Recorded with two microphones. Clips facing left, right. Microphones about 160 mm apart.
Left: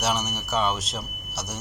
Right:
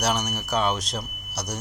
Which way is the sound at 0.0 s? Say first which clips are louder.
Right 1 dB; 5° left (ahead or behind).